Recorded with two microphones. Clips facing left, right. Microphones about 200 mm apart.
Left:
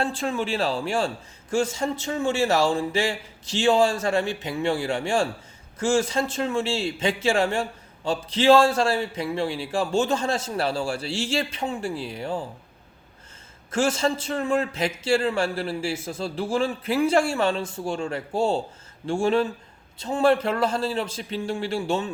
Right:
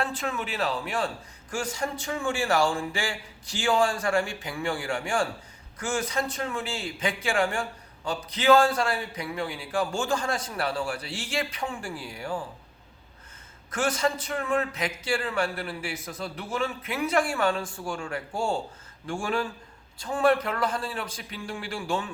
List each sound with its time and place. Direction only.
0.0 s a man's voice: 30° left (ahead or behind)
13.7 s a man's voice: 25° left (ahead or behind)